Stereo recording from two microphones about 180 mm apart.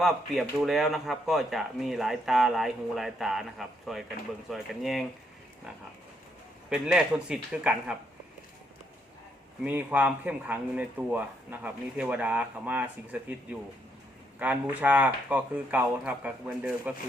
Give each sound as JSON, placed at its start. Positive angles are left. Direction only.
{"t": 0.0, "sound": "speech", "side_deg": 0}
{"t": 6.7, "sound": "speech", "side_deg": -5}
{"t": 9.6, "sound": "speech", "side_deg": -10}